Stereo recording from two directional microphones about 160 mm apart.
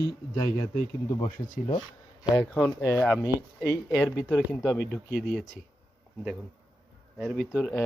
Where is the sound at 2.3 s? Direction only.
10° left (ahead or behind).